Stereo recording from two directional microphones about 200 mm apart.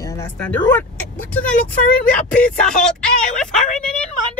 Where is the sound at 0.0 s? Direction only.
15° left (ahead or behind).